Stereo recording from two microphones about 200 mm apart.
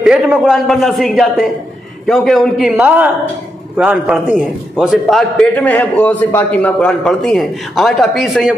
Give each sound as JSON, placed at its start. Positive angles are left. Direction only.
{"t": 0.0, "sound": "a man's voice", "side_deg": -5}